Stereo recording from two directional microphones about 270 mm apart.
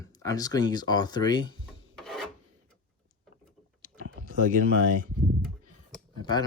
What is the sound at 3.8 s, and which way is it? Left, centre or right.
Typing, left.